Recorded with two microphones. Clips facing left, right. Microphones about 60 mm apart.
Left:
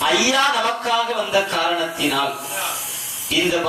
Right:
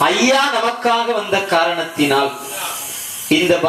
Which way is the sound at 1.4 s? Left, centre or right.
Right.